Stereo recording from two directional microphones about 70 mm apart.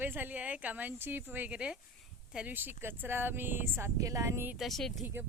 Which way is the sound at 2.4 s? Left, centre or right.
Right.